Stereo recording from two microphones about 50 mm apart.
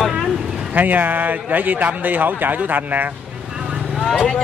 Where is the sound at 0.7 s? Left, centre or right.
Right.